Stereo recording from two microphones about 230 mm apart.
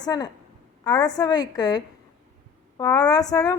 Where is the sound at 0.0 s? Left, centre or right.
Centre.